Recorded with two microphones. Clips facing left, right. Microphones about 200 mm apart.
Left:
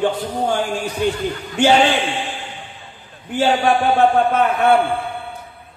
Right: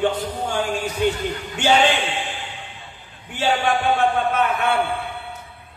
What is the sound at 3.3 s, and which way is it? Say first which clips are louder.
Speech: left 5 dB; 40° left (ahead or behind).